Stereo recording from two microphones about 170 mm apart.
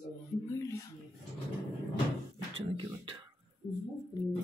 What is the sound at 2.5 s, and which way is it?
Beatboxing, 30° right (ahead or behind).